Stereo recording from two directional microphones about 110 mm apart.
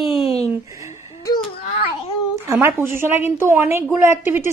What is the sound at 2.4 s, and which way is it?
A woman's voice, 25° right (ahead or behind).